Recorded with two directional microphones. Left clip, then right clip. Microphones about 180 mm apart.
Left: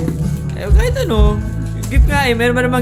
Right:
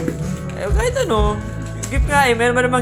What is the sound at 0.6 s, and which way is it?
Speech, 10° left (ahead or behind).